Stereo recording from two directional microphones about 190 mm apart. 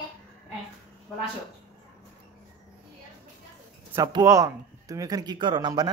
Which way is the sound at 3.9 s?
20° right (ahead or behind).